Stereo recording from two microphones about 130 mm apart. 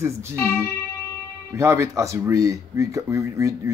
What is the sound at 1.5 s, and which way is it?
Speech, 20° right (ahead or behind).